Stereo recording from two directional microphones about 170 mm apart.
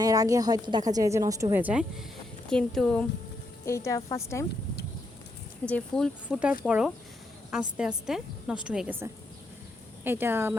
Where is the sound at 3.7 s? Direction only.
15° left (ahead or behind).